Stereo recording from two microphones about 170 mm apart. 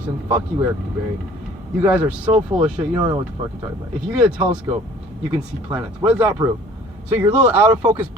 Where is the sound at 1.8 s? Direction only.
10° right (ahead or behind).